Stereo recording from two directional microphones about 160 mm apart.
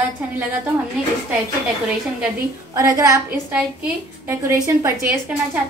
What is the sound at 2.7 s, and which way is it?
Speech, 20° right (ahead or behind).